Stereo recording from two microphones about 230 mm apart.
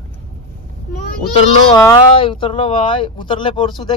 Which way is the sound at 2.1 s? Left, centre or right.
Left.